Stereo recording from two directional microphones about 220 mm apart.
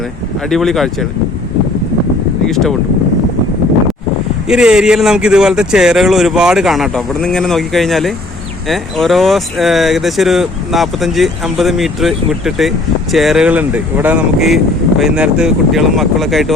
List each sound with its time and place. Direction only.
0.5 s speech: centre (ahead or behind)
2.5 s speech: centre (ahead or behind)
4.4 s speech: 5° right (ahead or behind)